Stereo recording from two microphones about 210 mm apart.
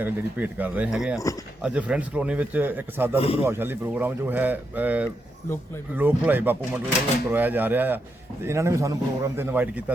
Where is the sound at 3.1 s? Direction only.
30° left (ahead or behind).